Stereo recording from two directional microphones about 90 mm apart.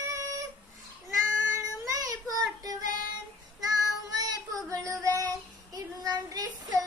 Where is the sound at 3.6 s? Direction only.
45° right (ahead or behind).